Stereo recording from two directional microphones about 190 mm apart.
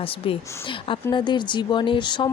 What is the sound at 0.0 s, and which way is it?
Speech, 30° left (ahead or behind).